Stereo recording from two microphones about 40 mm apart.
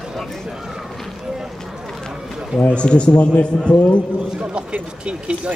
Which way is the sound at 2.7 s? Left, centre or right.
Left.